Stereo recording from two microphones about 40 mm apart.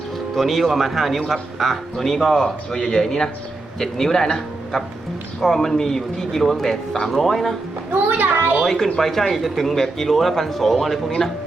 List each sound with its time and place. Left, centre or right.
0.3 s speech: centre
8.0 s a sound: right
8.6 s speech: centre